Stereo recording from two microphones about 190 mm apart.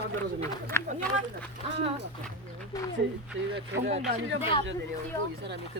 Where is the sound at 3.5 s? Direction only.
60° right (ahead or behind).